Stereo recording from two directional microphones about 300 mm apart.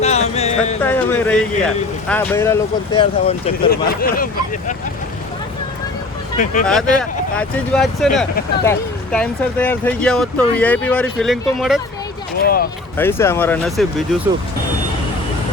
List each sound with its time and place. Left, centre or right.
0.0 s music: left
0.8 s speech: centre
3.7 s speech: left
6.3 s speech: left
6.7 s speech: centre
12.4 s speech: left
13.0 s speech: centre